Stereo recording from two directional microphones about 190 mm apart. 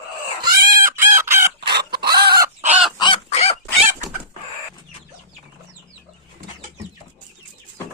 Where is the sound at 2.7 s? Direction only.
Centre (ahead or behind).